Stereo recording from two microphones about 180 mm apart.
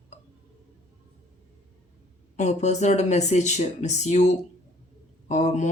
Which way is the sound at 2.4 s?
40° left (ahead or behind).